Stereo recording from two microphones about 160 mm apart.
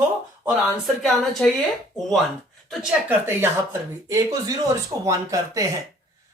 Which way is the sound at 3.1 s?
15° right (ahead or behind).